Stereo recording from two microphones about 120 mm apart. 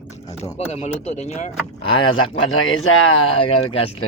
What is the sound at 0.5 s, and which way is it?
Speech, 60° left (ahead or behind).